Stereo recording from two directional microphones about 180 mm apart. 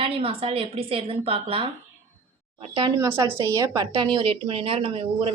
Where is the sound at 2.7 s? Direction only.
30° right (ahead or behind).